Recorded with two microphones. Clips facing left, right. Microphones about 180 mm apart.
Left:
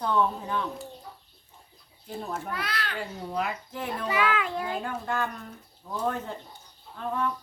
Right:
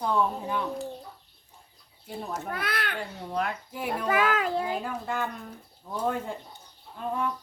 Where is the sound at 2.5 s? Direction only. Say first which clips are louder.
Right 1 dB; 55° right (ahead or behind).